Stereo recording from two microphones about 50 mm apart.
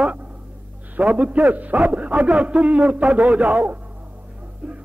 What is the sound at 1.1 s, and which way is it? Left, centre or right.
A man's voice, right.